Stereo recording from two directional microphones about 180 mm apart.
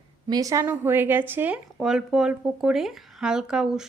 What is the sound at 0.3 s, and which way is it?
Speech, 20° right (ahead or behind).